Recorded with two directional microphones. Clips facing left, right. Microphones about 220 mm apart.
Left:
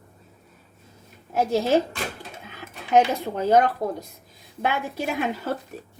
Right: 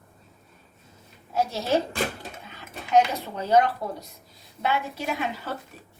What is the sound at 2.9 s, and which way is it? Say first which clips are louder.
A woman's voice: left 2 dB; 50° left (ahead or behind).